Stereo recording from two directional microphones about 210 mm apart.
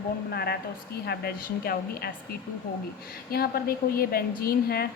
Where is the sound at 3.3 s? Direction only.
45° left (ahead or behind).